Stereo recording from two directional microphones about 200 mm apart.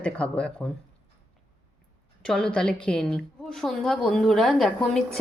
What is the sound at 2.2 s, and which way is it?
A woman's voice, 5° left (ahead or behind).